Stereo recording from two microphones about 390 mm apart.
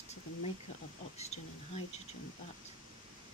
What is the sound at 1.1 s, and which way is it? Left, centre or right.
Speech, centre.